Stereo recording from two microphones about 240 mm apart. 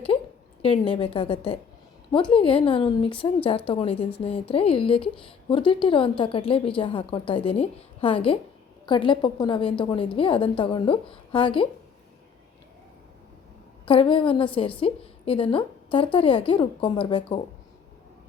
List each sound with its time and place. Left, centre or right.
0.6 s a woman's voice: left
13.8 s a woman's voice: left